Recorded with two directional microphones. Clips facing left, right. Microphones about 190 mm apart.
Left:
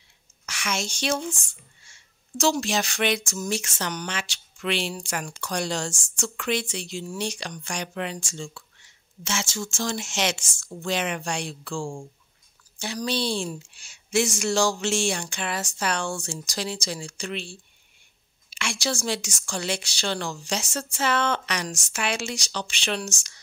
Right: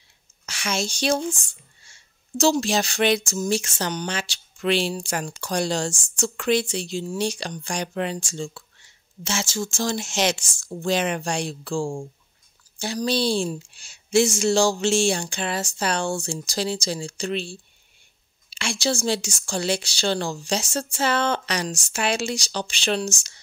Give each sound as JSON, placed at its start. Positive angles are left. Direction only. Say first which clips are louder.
{"t": 0.5, "sound": "speech", "louder": "right 3 dB", "side_deg": -30}